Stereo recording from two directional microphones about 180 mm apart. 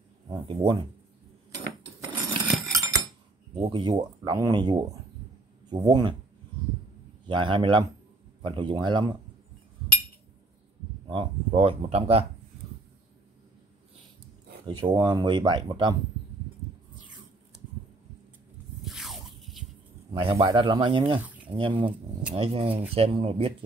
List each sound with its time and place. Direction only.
0.3 s speech: 25° right (ahead or behind)
2.7 s chink: 20° right (ahead or behind)
3.5 s speech: 30° right (ahead or behind)
7.2 s speech: 25° right (ahead or behind)
11.1 s speech: 30° right (ahead or behind)
14.7 s speech: 25° right (ahead or behind)
18.9 s drip: centre (ahead or behind)
20.1 s speech: 30° right (ahead or behind)